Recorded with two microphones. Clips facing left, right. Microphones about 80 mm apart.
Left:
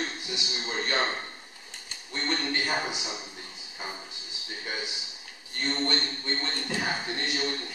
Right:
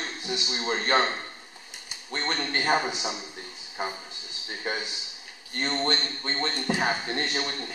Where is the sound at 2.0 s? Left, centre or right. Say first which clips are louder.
Right 1 dB; right.